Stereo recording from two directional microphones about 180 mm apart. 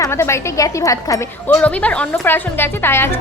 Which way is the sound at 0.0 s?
15° left (ahead or behind).